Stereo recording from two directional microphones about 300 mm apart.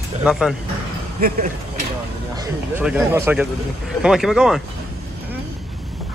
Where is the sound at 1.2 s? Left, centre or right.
Right.